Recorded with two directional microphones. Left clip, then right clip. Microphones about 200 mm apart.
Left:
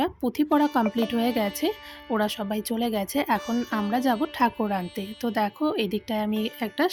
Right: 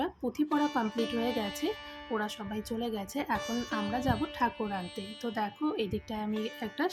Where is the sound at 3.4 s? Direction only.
Centre (ahead or behind).